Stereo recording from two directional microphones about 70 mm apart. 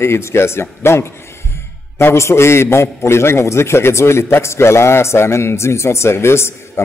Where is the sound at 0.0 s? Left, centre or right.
Left.